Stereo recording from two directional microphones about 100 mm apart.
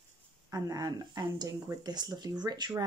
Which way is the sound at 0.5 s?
35° right (ahead or behind).